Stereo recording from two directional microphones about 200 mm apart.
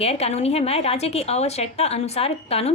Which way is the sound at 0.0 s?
30° left (ahead or behind).